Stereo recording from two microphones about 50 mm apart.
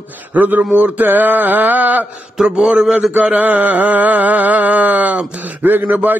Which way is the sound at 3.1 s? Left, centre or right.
Right.